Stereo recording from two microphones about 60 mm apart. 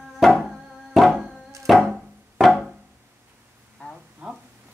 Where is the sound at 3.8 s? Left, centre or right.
Centre.